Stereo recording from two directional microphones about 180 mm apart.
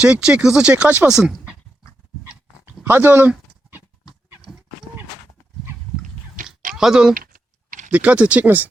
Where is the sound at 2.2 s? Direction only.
10° right (ahead or behind).